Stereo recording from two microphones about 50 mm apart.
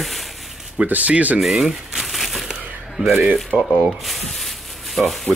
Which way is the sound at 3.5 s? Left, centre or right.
Right.